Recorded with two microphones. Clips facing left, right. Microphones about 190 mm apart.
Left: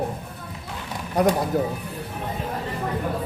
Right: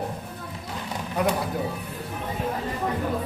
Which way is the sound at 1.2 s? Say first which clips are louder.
Left 5 dB; 40° left (ahead or behind).